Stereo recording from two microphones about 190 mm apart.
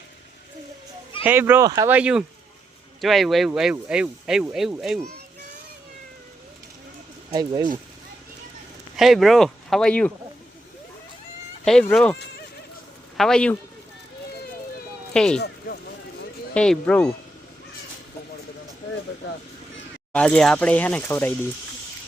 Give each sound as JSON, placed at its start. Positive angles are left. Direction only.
{"t": 1.2, "sound": "speech", "side_deg": -10}
{"t": 1.9, "sound": "speech", "side_deg": -5}
{"t": 7.3, "sound": "speech", "side_deg": -25}
{"t": 9.0, "sound": "speech", "side_deg": 0}
{"t": 11.6, "sound": "speech", "side_deg": 5}
{"t": 13.1, "sound": "speech", "side_deg": 5}
{"t": 15.1, "sound": "speech", "side_deg": 5}
{"t": 15.4, "sound": "speech", "side_deg": 60}
{"t": 16.6, "sound": "speech", "side_deg": 5}
{"t": 20.1, "sound": "speech", "side_deg": 5}